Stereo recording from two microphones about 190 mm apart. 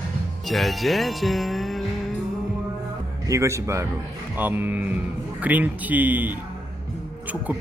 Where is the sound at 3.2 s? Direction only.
15° right (ahead or behind).